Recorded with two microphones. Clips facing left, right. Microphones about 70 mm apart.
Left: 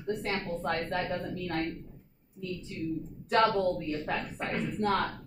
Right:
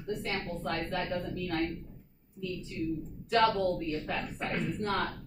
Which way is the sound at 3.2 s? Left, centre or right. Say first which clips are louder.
Left 1 dB; left.